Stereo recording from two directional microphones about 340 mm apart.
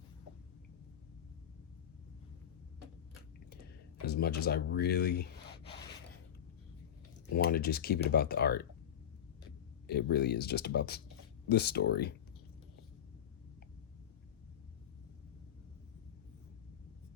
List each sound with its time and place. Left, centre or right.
4.0 s speech: left
7.3 s speech: left
9.8 s speech: left